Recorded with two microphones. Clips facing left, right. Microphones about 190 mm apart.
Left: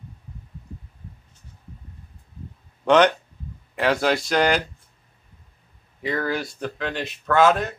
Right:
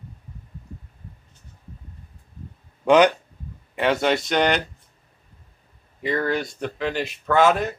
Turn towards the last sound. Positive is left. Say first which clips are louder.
# even
turn(degrees=0)  # may be behind; listen again after turning